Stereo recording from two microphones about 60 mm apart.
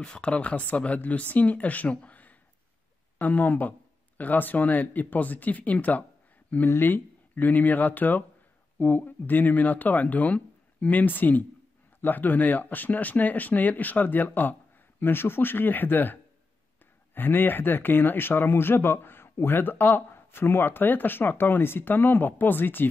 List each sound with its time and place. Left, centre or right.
0.0 s speech: centre; by 22.8 s left